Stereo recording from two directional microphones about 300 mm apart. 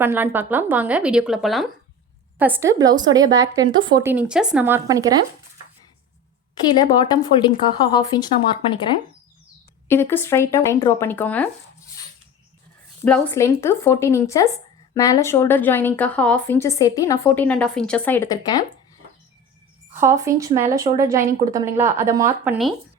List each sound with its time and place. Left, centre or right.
0.0 s a woman's voice: centre
6.5 s a woman's voice: centre
13.1 s a woman's voice: centre
20.0 s a woman's voice: centre